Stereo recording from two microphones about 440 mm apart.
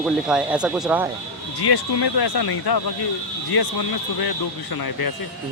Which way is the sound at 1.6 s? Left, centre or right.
Left.